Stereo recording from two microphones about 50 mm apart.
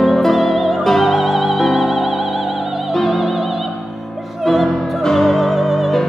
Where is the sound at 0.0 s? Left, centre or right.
Centre.